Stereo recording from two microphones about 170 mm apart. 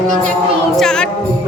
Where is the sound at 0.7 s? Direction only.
5° left (ahead or behind).